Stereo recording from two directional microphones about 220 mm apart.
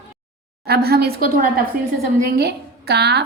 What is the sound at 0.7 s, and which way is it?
A woman's voice, 45° right (ahead or behind).